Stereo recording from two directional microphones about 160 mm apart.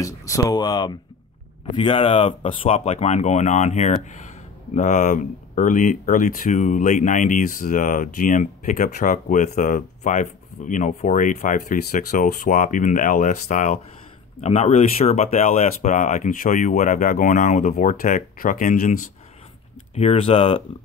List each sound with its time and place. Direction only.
0.0 s speech: 20° left (ahead or behind); by 18.9 s 55° left (ahead or behind)
19.9 s speech: 40° left (ahead or behind)